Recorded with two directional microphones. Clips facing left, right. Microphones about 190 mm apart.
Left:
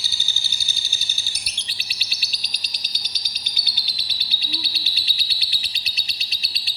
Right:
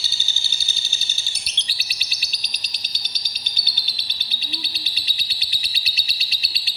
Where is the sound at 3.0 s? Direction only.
55° right (ahead or behind).